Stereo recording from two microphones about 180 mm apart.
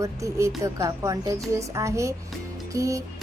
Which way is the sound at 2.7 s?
15° right (ahead or behind).